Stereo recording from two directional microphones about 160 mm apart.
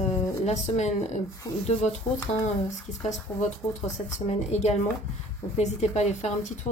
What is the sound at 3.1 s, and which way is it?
A woman's voice, 45° left (ahead or behind).